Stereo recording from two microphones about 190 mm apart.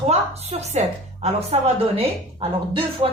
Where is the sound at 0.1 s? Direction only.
35° right (ahead or behind).